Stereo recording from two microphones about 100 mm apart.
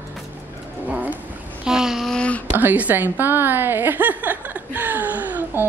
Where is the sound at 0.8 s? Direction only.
15° right (ahead or behind).